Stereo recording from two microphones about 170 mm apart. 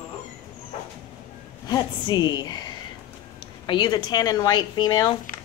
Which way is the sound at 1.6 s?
25° left (ahead or behind).